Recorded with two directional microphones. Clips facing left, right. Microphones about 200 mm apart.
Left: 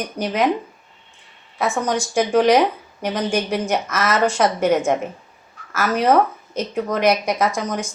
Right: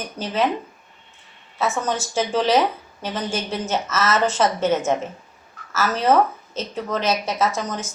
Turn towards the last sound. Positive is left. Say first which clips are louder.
# left 2 dB
turn(degrees=15)  # may be behind; listen again after turning